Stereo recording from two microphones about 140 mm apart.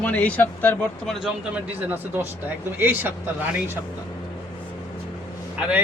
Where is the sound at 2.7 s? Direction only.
15° right (ahead or behind).